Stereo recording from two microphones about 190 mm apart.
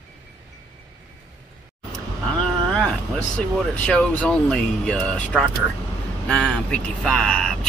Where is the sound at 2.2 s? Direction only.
5° left (ahead or behind).